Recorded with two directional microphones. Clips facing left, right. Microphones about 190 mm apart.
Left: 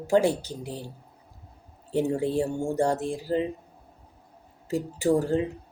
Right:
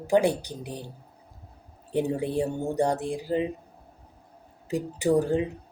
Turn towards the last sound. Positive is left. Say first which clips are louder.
# even
turn(degrees=-15)  # may be behind; listen again after turning